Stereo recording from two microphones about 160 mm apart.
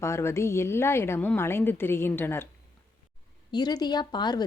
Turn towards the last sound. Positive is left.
turn(degrees=25)  # may be behind; listen again after turning